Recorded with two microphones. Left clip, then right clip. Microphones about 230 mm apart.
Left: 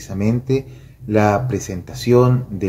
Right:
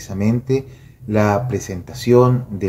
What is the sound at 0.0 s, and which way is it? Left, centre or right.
Speech, centre.